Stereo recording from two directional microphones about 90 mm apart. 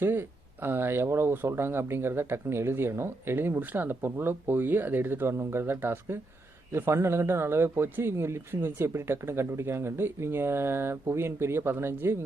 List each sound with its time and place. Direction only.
0.0 s speech: 25° right (ahead or behind)